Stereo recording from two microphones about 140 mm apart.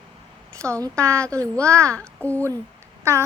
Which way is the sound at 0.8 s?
20° right (ahead or behind).